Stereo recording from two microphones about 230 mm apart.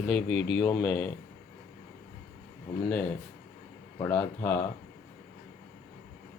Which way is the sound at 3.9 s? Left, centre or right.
Centre.